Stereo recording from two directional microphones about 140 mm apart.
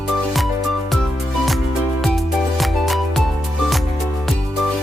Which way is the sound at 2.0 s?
Centre (ahead or behind).